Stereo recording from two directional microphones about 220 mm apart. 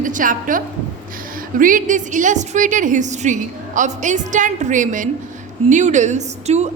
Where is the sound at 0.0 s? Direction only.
35° right (ahead or behind).